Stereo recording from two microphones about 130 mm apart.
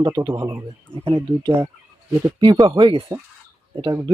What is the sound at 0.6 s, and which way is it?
Speech, 45° right (ahead or behind).